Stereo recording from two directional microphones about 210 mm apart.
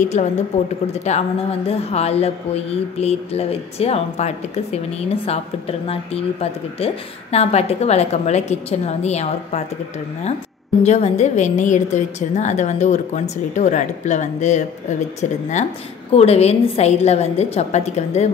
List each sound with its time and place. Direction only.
0.0 s a woman's voice: 35° left (ahead or behind)
10.8 s a woman's voice: 30° left (ahead or behind)